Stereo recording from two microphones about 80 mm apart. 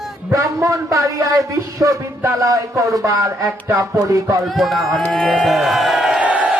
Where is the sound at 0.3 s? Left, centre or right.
Right.